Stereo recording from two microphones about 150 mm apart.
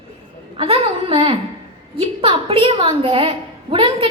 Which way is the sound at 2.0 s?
35° right (ahead or behind).